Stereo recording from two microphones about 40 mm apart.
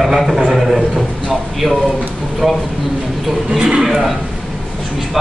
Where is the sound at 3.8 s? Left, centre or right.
Centre.